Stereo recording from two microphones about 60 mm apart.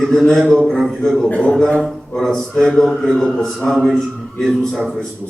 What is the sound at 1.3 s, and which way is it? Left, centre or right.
Speech, left.